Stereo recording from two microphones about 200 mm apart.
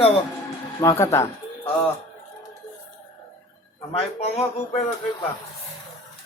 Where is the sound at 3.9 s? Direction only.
30° left (ahead or behind).